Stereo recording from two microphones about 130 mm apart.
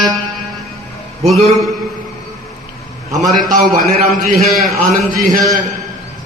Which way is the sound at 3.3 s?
90° right.